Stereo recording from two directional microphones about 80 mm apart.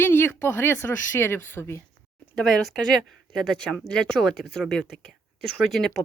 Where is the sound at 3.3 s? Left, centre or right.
Centre.